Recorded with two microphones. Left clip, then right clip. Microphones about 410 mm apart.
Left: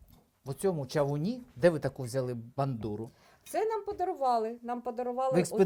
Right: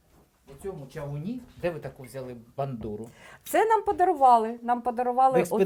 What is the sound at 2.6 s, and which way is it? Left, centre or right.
Speech, left.